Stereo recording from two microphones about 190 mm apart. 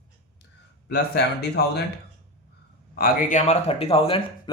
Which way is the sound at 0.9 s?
55° left (ahead or behind).